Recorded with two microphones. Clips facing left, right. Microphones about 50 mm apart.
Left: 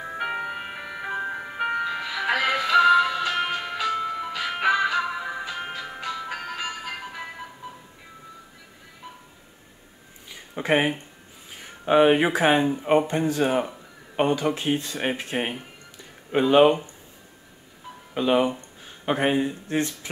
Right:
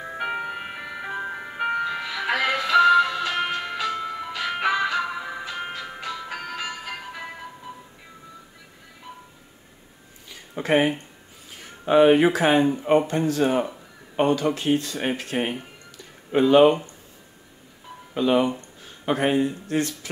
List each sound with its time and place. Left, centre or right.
0.0 s ice cream truck: centre
10.5 s speech: centre
18.1 s speech: centre